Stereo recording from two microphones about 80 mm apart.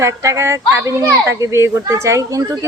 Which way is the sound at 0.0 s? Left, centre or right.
Right.